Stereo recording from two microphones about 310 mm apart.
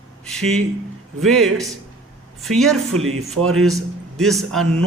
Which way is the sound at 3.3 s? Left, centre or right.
Right.